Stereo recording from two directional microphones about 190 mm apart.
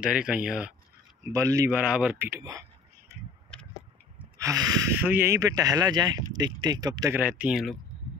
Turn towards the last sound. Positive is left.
turn(degrees=-5)  # may be behind; listen again after turning